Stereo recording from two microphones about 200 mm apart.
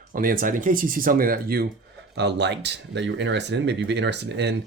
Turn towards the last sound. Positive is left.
turn(degrees=-60)  # may be behind; listen again after turning